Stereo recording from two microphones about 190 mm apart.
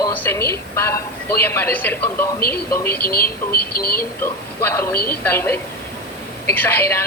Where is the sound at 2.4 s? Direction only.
50° left (ahead or behind).